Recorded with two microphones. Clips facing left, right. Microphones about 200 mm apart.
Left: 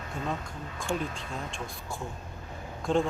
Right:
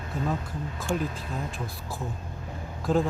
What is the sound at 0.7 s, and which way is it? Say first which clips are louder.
Speech: right 2 dB; 5° right (ahead or behind).